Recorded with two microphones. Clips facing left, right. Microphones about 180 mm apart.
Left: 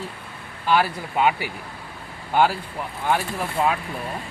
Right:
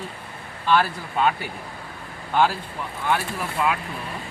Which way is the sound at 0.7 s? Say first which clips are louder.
Even; 10° left (ahead or behind).